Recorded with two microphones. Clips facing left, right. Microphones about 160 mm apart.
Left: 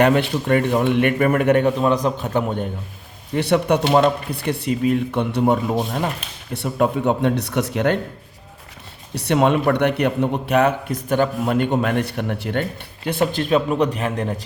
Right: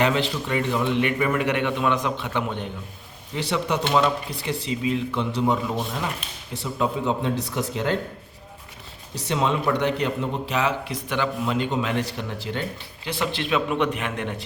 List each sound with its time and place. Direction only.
0.0 s a man's voice: 55° left (ahead or behind)
3.3 s speech: 55° left (ahead or behind)
6.5 s speech: 60° left (ahead or behind)
9.1 s speech: 65° left (ahead or behind)
13.1 s speech: 50° left (ahead or behind)